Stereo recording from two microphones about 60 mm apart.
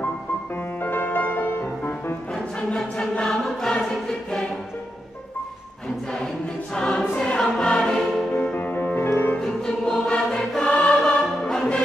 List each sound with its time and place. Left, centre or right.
0.8 s music: left
2.3 s choir: centre
6.7 s choir: centre
7.2 s music: centre
8.5 s music: left
9.4 s music: centre